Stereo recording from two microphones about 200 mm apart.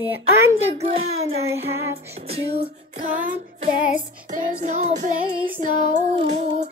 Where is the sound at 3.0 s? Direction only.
40° right (ahead or behind).